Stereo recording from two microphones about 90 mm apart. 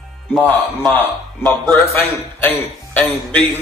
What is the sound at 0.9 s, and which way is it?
A man's voice, 20° left (ahead or behind).